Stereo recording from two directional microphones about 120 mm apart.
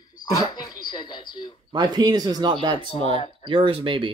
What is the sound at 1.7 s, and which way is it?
Speech, 35° right (ahead or behind).